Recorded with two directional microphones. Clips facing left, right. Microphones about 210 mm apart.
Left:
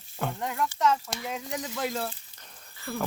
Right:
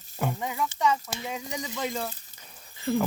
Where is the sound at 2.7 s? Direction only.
20° right (ahead or behind).